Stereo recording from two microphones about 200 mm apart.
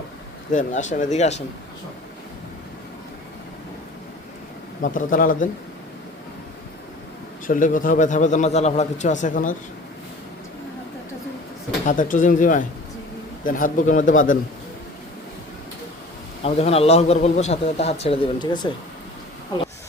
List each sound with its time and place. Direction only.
0.5 s a man's voice: 40° left (ahead or behind)
4.8 s speech: 45° left (ahead or behind)
7.4 s a man's voice: 40° left (ahead or behind)
11.9 s a man's voice: 40° left (ahead or behind)
16.4 s a man's voice: 30° left (ahead or behind)